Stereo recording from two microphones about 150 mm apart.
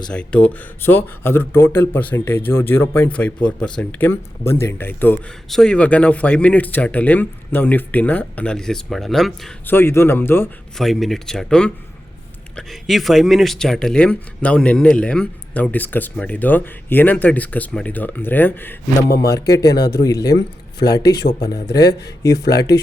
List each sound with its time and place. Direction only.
0.1 s speech: 5° left (ahead or behind)
9.6 s speech: 15° left (ahead or behind)
10.8 s a man's voice: centre (ahead or behind); by 20.3 s 25° left (ahead or behind)
20.7 s speech: 90° left
21.3 s speech: 25° left (ahead or behind)
22.4 s speech: 90° left